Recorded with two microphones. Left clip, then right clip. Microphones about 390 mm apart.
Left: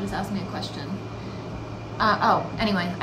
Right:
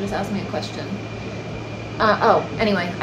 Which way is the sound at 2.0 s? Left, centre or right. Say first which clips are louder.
Right 4 dB; centre.